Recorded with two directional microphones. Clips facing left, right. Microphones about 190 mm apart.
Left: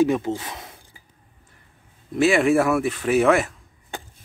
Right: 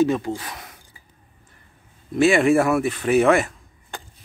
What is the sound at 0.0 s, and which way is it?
Speech, 20° left (ahead or behind).